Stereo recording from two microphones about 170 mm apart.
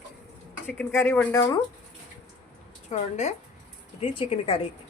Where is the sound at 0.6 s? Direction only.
10° left (ahead or behind).